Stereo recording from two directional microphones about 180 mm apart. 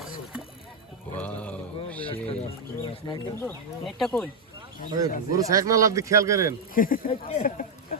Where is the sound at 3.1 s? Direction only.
15° left (ahead or behind).